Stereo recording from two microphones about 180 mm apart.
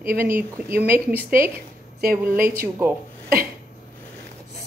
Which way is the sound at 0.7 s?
15° right (ahead or behind).